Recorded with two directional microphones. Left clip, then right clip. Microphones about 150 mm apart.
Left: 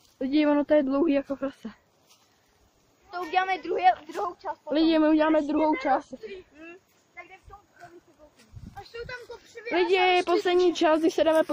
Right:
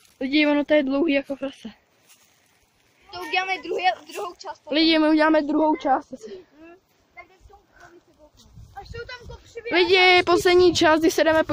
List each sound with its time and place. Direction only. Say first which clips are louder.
0.2 s speech: right 3 dB; 5° right (ahead or behind)
1.1 s speech: right 3 dB; 5° left (ahead or behind)
3.1 s speech: right 1 dB; 20° left (ahead or behind)
4.6 s speech: right 3 dB; 10° right (ahead or behind); by 6.0 s 30° right (ahead or behind)
8.7 s speech: right 2 dB; 65° right (ahead or behind)
9.7 s speech: right 6 dB; 25° right (ahead or behind)